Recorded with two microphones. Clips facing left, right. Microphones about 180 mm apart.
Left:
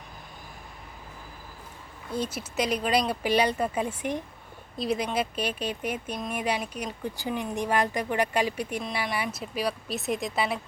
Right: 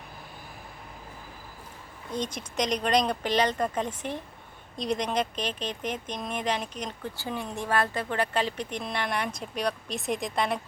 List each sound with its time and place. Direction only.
2.1 s speech: 5° left (ahead or behind)